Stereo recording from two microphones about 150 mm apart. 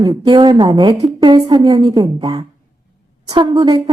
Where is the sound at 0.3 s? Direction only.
30° right (ahead or behind).